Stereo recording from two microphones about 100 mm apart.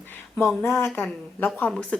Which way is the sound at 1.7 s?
10° left (ahead or behind).